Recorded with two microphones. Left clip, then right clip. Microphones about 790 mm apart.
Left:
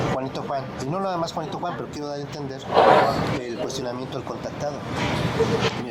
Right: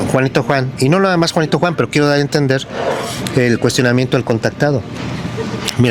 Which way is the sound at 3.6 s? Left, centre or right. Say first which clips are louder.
Right 14 dB; right.